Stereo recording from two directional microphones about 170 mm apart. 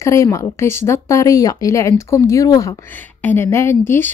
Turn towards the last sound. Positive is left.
turn(degrees=15)  # may be behind; listen again after turning